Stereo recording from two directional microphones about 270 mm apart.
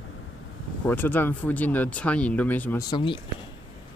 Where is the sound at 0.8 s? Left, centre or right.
Centre.